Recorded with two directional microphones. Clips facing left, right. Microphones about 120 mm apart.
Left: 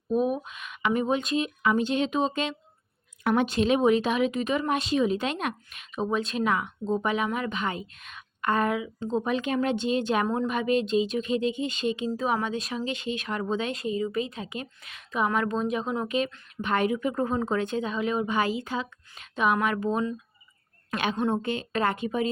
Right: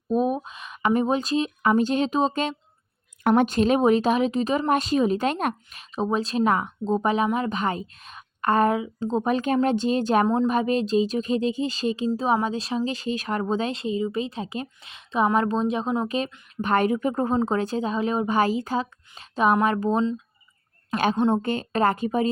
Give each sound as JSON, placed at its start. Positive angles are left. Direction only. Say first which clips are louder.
{"t": 0.1, "sound": "speech", "louder": "right 2 dB", "side_deg": -35}
{"t": 21.2, "sound": "a woman's voice", "louder": "right 4 dB", "side_deg": -20}
{"t": 21.4, "sound": "speech", "louder": "right 4 dB", "side_deg": -45}